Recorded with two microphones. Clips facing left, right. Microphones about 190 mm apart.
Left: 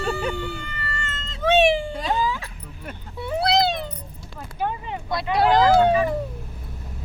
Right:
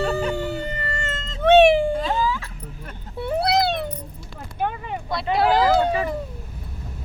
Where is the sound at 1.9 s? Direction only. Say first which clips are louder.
Right 1 dB; 15° left (ahead or behind).